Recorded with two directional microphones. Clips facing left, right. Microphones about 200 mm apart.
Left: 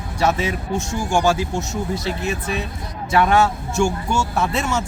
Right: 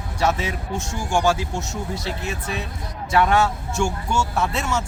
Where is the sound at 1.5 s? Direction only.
20° left (ahead or behind).